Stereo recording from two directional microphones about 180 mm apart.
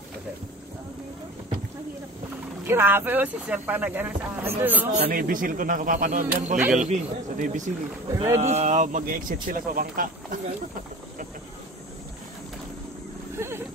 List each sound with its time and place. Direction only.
2.6 s speech: 10° right (ahead or behind)
4.9 s speech: 50° right (ahead or behind)
13.4 s a sound: 15° right (ahead or behind)